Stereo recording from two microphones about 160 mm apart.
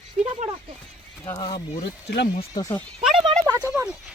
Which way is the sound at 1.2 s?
25° left (ahead or behind).